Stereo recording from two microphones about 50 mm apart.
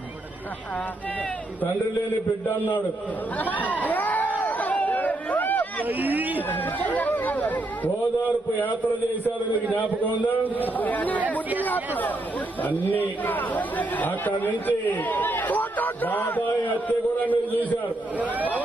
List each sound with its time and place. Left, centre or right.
3.4 s speech: left
4.5 s chatter: left
5.9 s speech: right
6.5 s speech: left
9.2 s speech: left
11.1 s speech: right
12.6 s speech: left
18.2 s speech: right